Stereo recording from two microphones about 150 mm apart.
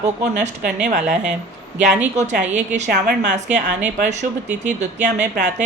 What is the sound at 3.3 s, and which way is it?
A woman's voice, 55° right (ahead or behind).